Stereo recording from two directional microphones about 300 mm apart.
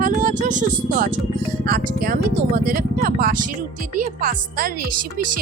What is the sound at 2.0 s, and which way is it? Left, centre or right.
Speech, right.